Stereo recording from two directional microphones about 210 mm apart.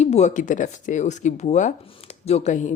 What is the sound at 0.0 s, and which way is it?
A woman's voice, 30° left (ahead or behind).